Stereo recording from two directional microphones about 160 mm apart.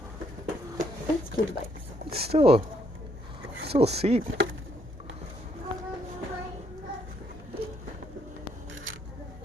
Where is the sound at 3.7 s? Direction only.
40° right (ahead or behind).